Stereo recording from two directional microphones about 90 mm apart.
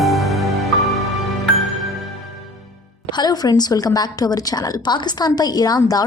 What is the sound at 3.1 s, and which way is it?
A woman's voice, 50° left (ahead or behind).